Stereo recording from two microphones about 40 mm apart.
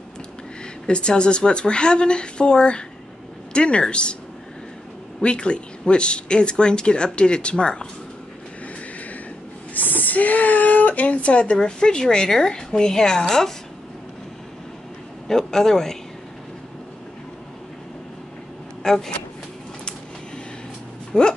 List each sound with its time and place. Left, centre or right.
0.8 s speech: left
5.2 s speech: left
9.8 s speech: left; by 13.5 s centre
15.2 s a man's voice: centre
18.8 s speech: centre
21.1 s speech: left